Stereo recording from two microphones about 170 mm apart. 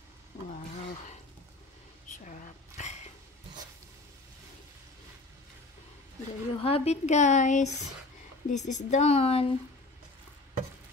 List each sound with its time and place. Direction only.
2.2 s speech: 45° left (ahead or behind)
6.5 s a woman's voice: 35° left (ahead or behind)